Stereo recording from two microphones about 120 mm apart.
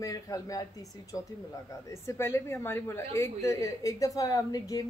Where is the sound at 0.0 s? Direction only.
30° left (ahead or behind).